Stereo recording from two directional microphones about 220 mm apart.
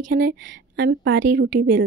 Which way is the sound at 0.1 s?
50° right (ahead or behind).